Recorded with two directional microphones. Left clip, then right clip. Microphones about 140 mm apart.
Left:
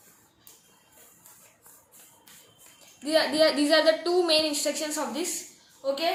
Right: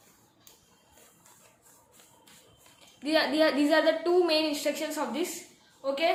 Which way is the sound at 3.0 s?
15° right (ahead or behind).